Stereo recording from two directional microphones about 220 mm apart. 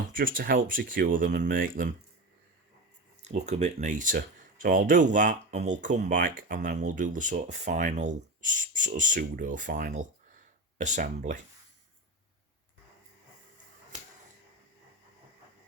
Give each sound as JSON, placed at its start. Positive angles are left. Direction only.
{"t": 0.1, "sound": "speech", "side_deg": -40}
{"t": 3.2, "sound": "speech", "side_deg": -30}